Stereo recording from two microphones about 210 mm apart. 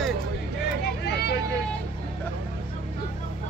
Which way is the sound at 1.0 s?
50° left (ahead or behind).